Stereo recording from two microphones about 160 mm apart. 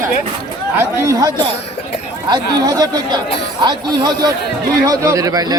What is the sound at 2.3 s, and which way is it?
A man's voice, 25° right (ahead or behind).